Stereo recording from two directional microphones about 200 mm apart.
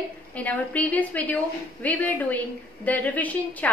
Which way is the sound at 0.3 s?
5° left (ahead or behind).